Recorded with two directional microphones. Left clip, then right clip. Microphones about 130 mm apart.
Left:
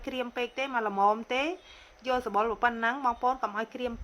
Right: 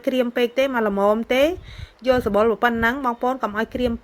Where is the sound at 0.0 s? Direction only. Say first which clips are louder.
Right 13 dB; 30° right (ahead or behind).